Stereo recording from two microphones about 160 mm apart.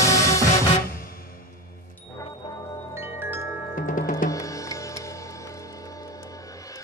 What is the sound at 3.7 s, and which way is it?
Music, 55° left (ahead or behind).